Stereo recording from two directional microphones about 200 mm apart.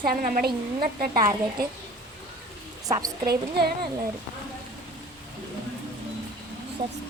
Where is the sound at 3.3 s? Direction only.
50° right (ahead or behind).